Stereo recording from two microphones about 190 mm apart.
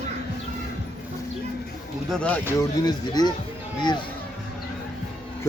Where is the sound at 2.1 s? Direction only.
5° left (ahead or behind).